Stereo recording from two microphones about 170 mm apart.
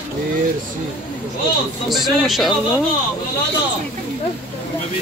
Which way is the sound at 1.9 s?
Centre (ahead or behind).